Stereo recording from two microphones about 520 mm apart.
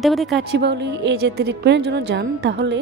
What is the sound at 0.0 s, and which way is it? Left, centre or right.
Speech, centre.